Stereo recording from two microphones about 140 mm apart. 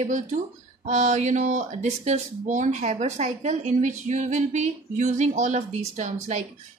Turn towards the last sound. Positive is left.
turn(degrees=-55)  # may be behind; listen again after turning